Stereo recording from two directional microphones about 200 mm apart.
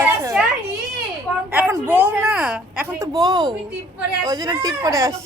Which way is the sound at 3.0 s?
20° right (ahead or behind).